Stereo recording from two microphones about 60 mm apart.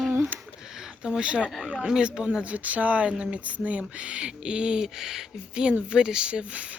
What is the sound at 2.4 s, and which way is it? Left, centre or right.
Speech, right.